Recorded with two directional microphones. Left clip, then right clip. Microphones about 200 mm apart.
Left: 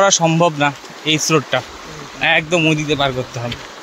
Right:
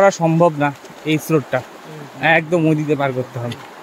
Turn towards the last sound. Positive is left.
turn(degrees=-10)  # may be behind; listen again after turning